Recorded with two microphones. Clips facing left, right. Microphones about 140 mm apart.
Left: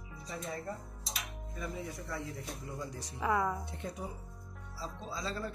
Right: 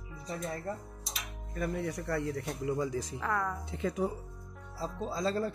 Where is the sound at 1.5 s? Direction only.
65° right (ahead or behind); by 2.9 s 80° right.